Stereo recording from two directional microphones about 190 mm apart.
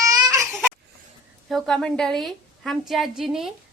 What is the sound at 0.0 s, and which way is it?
Baby cry, 20° right (ahead or behind).